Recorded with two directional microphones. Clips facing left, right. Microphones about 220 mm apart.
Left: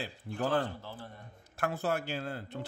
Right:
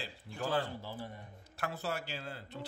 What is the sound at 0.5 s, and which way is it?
Speech, 10° right (ahead or behind).